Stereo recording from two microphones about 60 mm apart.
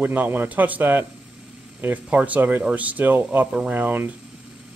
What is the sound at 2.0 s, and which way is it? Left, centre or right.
Speech, right.